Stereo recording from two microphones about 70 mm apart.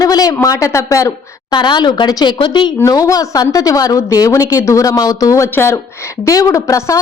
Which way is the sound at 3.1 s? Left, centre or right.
Left.